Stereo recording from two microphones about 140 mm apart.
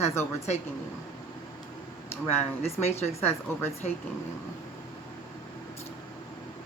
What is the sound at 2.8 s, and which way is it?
Speech, 50° left (ahead or behind).